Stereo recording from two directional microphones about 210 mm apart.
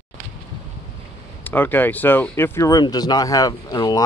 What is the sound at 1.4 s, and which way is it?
Speech, 10° left (ahead or behind).